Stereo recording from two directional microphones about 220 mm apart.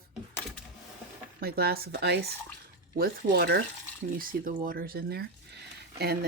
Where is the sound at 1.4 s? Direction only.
45° right (ahead or behind).